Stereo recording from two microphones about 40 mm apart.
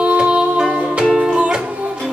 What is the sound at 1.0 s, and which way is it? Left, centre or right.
Music, centre.